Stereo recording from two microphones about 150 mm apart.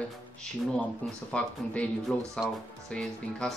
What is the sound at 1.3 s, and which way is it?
Speech, 5° left (ahead or behind).